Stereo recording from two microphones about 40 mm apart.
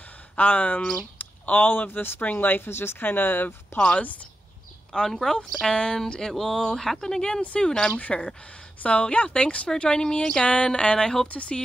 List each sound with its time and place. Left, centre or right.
0.4 s speech: left
1.1 s a sound: left
1.9 s speech: left
2.7 s speech: left
3.0 s speech: left
3.9 s speech: left
4.9 s speech: centre
6.3 s speech: centre
7.9 s speech: left
11.2 s speech: left